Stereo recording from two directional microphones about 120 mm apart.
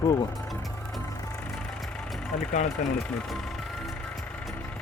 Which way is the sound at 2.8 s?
90° left.